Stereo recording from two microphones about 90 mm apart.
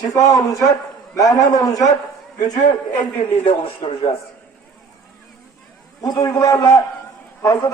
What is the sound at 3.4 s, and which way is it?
Speech, 90° left.